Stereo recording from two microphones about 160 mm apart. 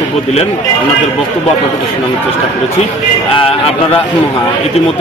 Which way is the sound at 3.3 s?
35° left (ahead or behind).